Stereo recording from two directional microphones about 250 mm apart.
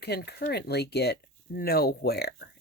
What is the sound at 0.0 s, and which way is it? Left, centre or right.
Speech, left.